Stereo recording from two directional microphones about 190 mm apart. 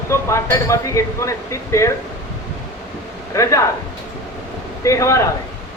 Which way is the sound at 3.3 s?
15° left (ahead or behind).